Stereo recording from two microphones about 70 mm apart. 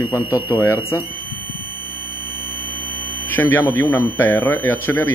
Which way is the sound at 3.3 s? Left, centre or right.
Left.